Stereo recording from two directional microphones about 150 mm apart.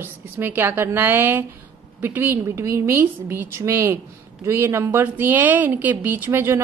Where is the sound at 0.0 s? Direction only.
15° right (ahead or behind).